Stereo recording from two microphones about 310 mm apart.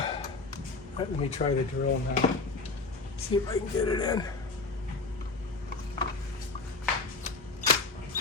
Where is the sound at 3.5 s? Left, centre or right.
Centre.